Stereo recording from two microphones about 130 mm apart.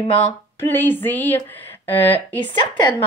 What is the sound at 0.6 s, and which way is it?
Speech, 15° left (ahead or behind).